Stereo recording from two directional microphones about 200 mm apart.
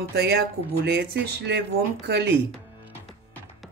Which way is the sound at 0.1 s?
50° right (ahead or behind).